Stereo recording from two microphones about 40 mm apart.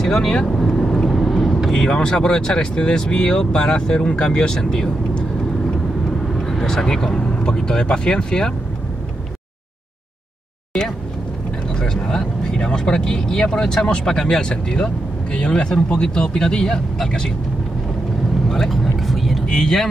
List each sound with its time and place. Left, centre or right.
0.0 s speech: centre
0.6 s vehicle: centre
1.7 s speech: centre
6.6 s speech: centre
11.8 s speech: centre
18.5 s vehicle: centre
19.4 s speech: centre